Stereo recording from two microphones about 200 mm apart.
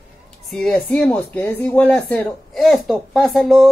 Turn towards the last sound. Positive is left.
turn(degrees=0)  # may be behind; listen again after turning